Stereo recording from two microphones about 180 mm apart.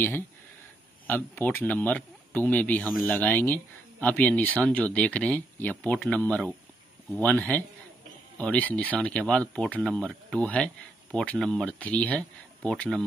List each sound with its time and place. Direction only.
1.0 s speech: 10° left (ahead or behind)